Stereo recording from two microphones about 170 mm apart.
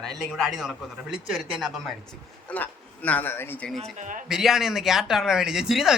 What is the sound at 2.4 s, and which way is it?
Speech, 10° left (ahead or behind).